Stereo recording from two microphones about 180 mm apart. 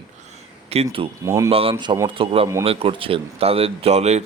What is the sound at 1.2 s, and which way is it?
Speech, 15° right (ahead or behind).